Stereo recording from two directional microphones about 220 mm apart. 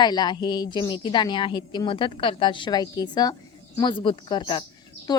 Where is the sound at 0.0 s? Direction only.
20° left (ahead or behind).